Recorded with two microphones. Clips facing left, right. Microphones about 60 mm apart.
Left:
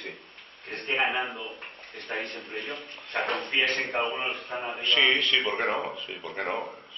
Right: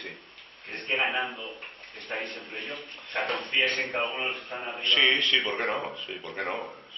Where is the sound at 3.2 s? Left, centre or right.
Left.